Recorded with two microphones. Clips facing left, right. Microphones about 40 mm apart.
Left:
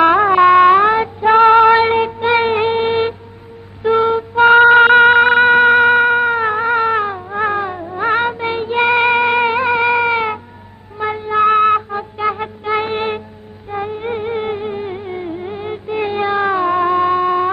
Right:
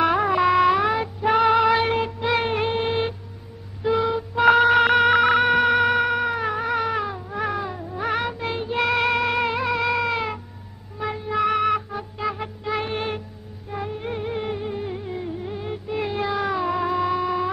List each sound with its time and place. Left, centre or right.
0.0 s music: left